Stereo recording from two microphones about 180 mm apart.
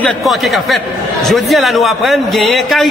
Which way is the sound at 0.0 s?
Centre (ahead or behind).